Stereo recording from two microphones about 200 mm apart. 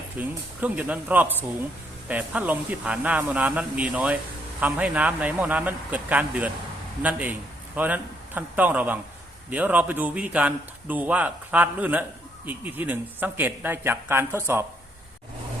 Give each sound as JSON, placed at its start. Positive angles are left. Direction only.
{"t": 0.2, "sound": "a man's voice", "side_deg": -5}